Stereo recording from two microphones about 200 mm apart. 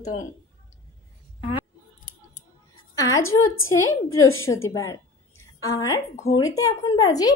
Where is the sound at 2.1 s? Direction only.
40° left (ahead or behind).